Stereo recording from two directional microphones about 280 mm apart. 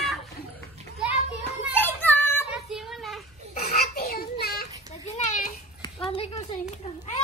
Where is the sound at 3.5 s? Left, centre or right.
Left.